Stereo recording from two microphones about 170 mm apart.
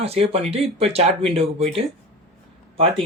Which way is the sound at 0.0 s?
35° right (ahead or behind).